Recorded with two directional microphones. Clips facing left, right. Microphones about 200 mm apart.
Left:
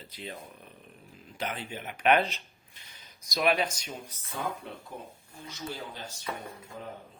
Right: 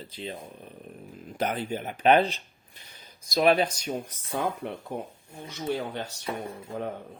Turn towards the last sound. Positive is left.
turn(degrees=-65)  # may be behind; listen again after turning